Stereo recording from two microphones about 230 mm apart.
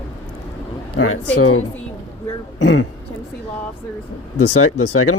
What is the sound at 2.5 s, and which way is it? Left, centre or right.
Speech, left.